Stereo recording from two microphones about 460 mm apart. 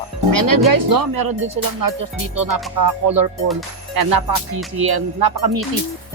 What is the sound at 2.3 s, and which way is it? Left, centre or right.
Speech, right.